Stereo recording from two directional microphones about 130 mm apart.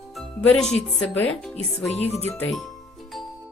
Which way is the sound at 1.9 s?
55° left (ahead or behind).